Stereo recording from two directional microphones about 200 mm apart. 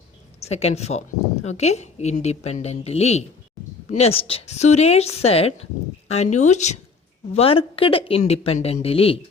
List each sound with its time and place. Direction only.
0.3 s a woman's voice: 30° left (ahead or behind)